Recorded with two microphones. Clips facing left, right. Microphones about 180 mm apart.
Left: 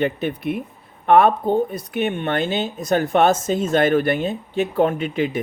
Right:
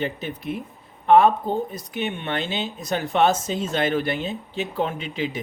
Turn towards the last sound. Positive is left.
turn(degrees=55)  # may be behind; listen again after turning